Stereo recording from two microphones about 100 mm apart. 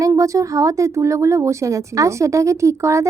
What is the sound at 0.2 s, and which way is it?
A woman's voice, 35° right (ahead or behind).